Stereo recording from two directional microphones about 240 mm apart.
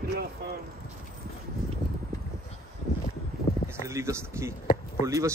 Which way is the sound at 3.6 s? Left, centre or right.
Centre.